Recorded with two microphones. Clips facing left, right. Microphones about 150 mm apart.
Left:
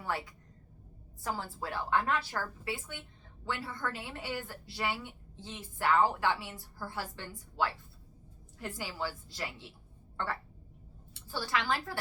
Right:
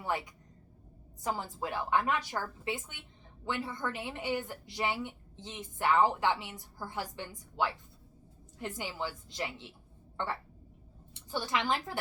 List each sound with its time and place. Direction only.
0.0 s a woman's voice: 20° right (ahead or behind)